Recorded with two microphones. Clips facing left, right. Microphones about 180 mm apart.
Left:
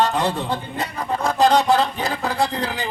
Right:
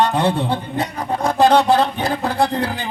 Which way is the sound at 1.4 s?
60° right (ahead or behind).